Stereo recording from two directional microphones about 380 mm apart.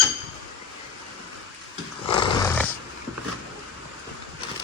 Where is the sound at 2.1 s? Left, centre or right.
Centre.